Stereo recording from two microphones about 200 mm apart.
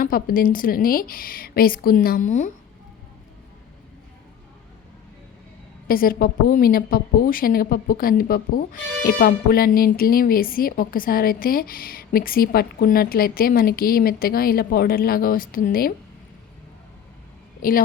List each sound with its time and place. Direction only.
0.0 s a woman's voice: 45° left (ahead or behind)
5.9 s a woman's voice: 45° left (ahead or behind)
17.6 s a woman's voice: 45° left (ahead or behind)